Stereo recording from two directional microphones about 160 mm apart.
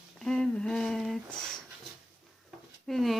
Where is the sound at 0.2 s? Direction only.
5° left (ahead or behind).